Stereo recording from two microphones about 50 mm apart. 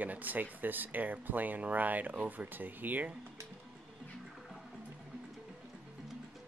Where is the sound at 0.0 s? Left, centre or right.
Right.